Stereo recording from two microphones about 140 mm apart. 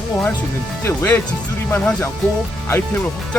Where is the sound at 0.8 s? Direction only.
15° left (ahead or behind).